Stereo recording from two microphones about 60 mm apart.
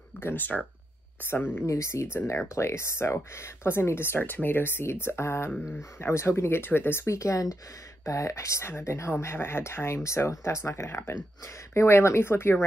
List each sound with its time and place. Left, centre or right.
0.2 s speech: left
1.7 s speech: left